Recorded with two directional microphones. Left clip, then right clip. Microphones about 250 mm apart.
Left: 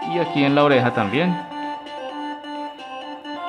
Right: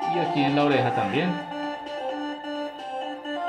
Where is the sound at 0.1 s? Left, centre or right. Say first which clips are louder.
Left 6 dB; left.